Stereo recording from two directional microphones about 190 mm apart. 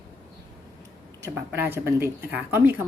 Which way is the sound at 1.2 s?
15° right (ahead or behind).